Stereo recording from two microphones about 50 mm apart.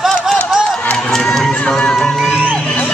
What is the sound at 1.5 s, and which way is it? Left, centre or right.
Music, centre.